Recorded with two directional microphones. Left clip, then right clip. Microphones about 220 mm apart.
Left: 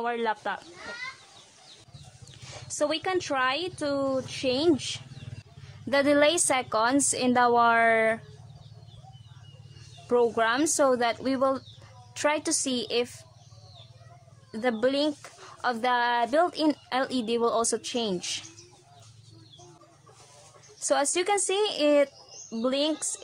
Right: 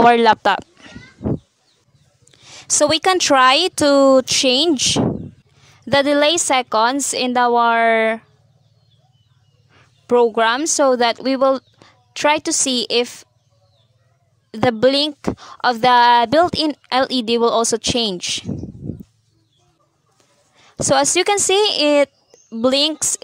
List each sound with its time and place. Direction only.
0.0 s speech: 45° right (ahead or behind)
2.4 s speech: 40° right (ahead or behind)
10.0 s speech: 35° right (ahead or behind)
14.5 s speech: 40° right (ahead or behind)
20.8 s speech: 40° right (ahead or behind)